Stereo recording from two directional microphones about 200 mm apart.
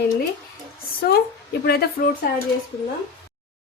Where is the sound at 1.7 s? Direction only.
50° left (ahead or behind).